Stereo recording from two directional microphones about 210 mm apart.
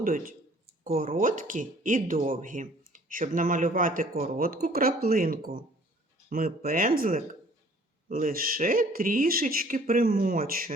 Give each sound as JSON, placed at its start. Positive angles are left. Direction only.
{"t": 0.0, "sound": "speech", "side_deg": -40}